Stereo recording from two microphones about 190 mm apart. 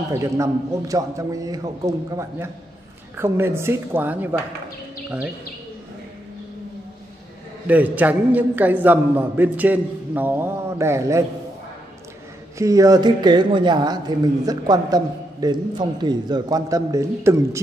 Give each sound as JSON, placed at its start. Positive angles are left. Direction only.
{"t": 0.1, "sound": "a man's voice", "side_deg": -15}
{"t": 7.6, "sound": "a man's voice", "side_deg": -10}
{"t": 12.5, "sound": "speech", "side_deg": -15}